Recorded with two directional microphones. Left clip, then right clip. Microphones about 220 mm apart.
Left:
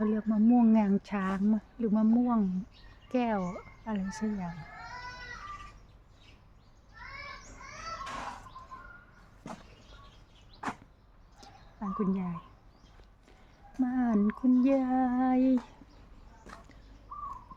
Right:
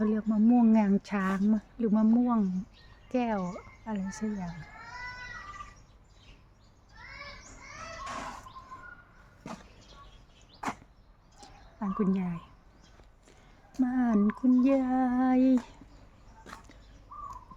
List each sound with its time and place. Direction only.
0.0 s speech: 5° right (ahead or behind)
3.1 s speech: centre (ahead or behind)
10.6 s a sound: 20° right (ahead or behind)
11.8 s female singing: 15° right (ahead or behind)
13.8 s female singing: 10° right (ahead or behind)